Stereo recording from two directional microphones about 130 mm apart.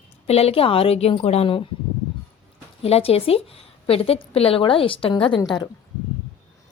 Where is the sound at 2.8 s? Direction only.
50° left (ahead or behind); by 5.6 s 35° left (ahead or behind).